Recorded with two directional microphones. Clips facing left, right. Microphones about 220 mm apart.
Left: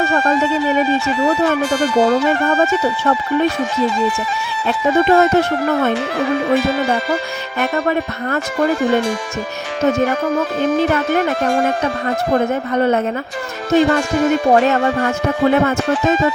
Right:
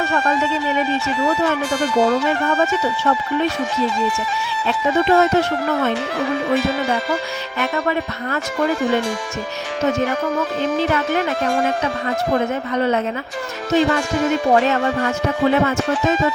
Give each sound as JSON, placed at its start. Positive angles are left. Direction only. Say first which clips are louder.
{"t": 0.0, "sound": "speech", "louder": "left 4 dB", "side_deg": 45}
{"t": 1.7, "sound": "speech", "louder": "left 1 dB", "side_deg": 70}
{"t": 2.2, "sound": "speech", "louder": "left 3 dB", "side_deg": 45}
{"t": 4.9, "sound": "speech", "louder": "left 3 dB", "side_deg": 45}
{"t": 5.1, "sound": "speech", "louder": "left 2 dB", "side_deg": 55}
{"t": 7.6, "sound": "speech", "louder": "left 3 dB", "side_deg": 45}
{"t": 10.6, "sound": "speech", "louder": "left 4 dB", "side_deg": 50}
{"t": 11.4, "sound": "speech", "louder": "left 1 dB", "side_deg": 65}
{"t": 11.8, "sound": "speech", "louder": "left 2 dB", "side_deg": 45}